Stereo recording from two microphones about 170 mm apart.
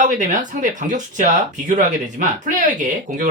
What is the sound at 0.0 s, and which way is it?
Speech, 50° right (ahead or behind).